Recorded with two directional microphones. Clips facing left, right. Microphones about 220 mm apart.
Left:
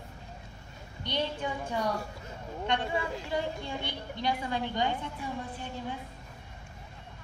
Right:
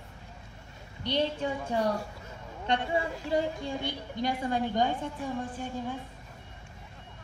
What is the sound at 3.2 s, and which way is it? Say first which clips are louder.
A woman's voice: right 4 dB; 40° right (ahead or behind).